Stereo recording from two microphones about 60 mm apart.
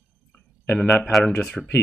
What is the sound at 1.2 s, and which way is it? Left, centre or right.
Speech, centre.